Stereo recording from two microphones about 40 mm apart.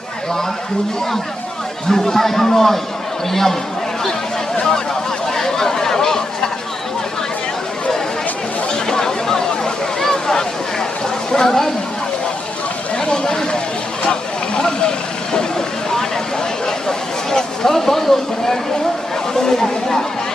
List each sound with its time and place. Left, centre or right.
1.9 s speech: centre
5.3 s chatter: centre
8.7 s a sound: centre
11.3 s speech: centre
13.0 s a sound: centre
14.0 s vehicle: left
17.3 s speech: centre